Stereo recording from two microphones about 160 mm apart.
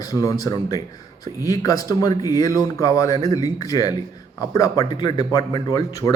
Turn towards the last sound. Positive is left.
turn(degrees=20)  # may be behind; listen again after turning